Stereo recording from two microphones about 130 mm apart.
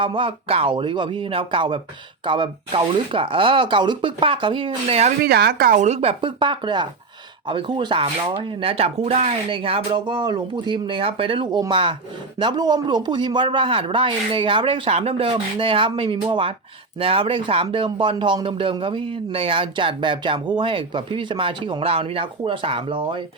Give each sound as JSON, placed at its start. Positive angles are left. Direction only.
{"t": 0.0, "sound": "speech", "side_deg": -40}
{"t": 5.6, "sound": "speech", "side_deg": -70}